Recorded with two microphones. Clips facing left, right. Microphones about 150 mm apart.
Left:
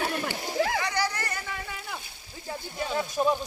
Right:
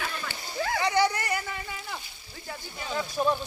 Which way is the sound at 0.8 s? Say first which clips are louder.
Right 4 dB; 20° right (ahead or behind).